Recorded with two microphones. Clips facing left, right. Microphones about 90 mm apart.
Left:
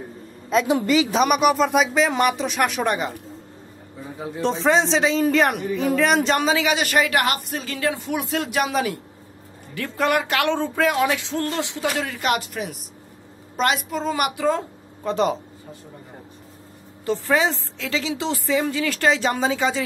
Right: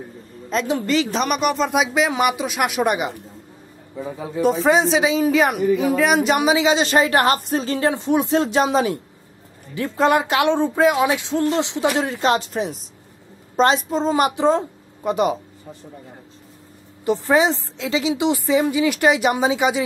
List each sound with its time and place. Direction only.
0.5 s a woman's voice: 5° left (ahead or behind)
4.4 s a woman's voice: 5° right (ahead or behind); by 14.6 s 25° right (ahead or behind)
15.0 s a woman's voice: 10° right (ahead or behind)
17.0 s a woman's voice: 20° right (ahead or behind)